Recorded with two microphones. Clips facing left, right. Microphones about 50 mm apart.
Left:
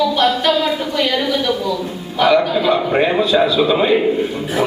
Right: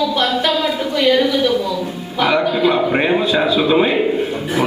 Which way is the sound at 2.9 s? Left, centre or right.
Centre.